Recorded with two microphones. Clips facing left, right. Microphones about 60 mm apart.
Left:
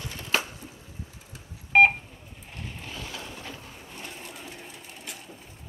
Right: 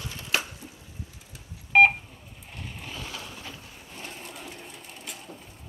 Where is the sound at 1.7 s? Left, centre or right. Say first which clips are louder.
Even; centre.